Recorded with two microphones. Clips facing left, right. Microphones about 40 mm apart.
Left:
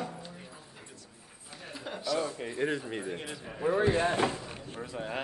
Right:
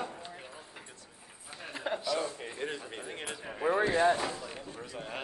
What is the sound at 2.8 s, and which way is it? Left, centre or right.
Speech, centre.